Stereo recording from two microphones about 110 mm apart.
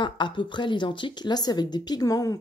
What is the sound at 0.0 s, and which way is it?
A woman's voice, 45° left (ahead or behind).